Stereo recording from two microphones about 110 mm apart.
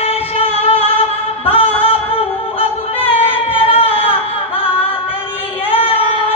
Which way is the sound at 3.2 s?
60° left (ahead or behind).